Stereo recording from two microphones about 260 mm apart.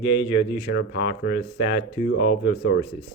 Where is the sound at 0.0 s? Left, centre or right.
Left.